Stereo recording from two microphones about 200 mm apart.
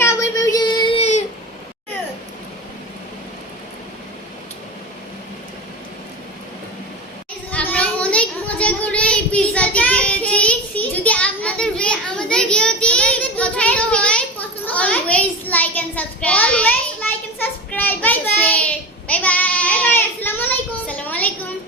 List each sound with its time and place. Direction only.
0.0 s child singing: 15° left (ahead or behind); by 1.2 s 30° left (ahead or behind)
7.7 s child singing: 5° left (ahead or behind)